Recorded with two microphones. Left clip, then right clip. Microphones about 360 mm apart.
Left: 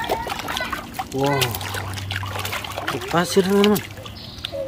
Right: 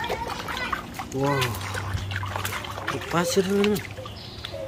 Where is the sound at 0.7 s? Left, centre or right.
Left.